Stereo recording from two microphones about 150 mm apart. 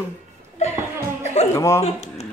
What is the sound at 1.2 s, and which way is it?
Music, 45° left (ahead or behind).